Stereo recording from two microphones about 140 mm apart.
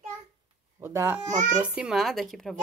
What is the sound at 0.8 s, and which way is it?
Speech, 20° right (ahead or behind).